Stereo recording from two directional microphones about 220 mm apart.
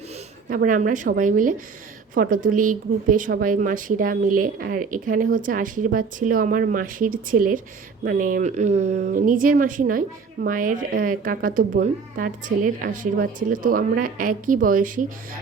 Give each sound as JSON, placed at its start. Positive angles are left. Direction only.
{"t": 0.4, "sound": "a woman's voice", "side_deg": -40}